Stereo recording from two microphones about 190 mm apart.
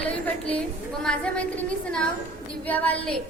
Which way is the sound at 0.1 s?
5° left (ahead or behind).